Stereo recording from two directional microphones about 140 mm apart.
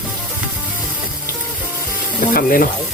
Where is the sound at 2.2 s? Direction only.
85° left.